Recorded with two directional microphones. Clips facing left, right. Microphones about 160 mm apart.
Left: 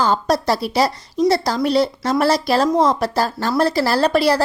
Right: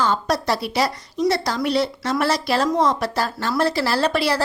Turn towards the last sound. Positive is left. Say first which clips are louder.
# left 4 dB
turn(degrees=40)  # may be behind; listen again after turning